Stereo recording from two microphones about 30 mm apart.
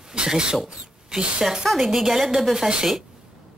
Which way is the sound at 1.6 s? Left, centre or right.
Centre.